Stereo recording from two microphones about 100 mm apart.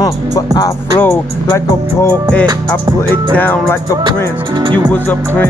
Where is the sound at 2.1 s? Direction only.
15° left (ahead or behind).